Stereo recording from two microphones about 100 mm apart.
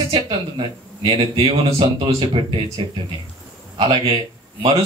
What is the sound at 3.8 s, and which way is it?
Speech, 55° right (ahead or behind).